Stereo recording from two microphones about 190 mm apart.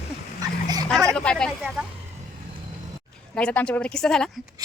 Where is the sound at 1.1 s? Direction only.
5° left (ahead or behind).